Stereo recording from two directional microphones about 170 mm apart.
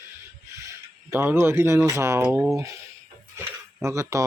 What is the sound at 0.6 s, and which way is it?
Speech, 15° right (ahead or behind).